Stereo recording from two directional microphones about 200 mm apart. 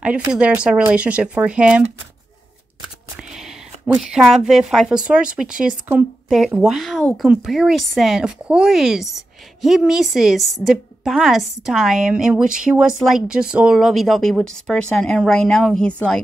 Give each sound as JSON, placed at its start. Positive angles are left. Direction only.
{"t": 0.3, "sound": "speech", "side_deg": -5}
{"t": 3.2, "sound": "a woman's voice", "side_deg": 0}